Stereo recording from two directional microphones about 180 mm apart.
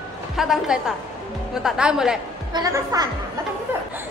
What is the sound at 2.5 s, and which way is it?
Speech, 20° right (ahead or behind).